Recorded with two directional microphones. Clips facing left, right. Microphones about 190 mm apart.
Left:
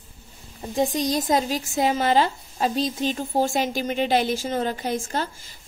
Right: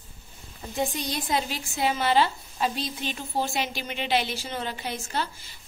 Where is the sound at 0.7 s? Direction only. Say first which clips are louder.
Left 7 dB; 40° left (ahead or behind).